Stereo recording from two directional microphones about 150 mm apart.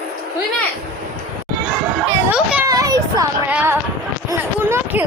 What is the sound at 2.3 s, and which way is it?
Children playing, 5° right (ahead or behind).